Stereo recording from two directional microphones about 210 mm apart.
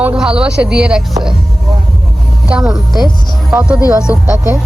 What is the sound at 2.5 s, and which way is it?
Speech, 5° right (ahead or behind).